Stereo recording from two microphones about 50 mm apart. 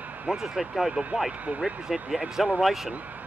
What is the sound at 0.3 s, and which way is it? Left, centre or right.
Speech, centre.